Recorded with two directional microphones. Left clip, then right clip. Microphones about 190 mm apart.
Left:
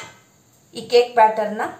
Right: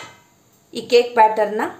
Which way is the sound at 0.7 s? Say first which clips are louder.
Right 1 dB; 60° right (ahead or behind).